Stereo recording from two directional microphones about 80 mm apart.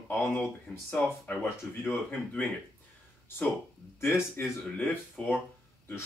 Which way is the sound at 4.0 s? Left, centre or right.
Left.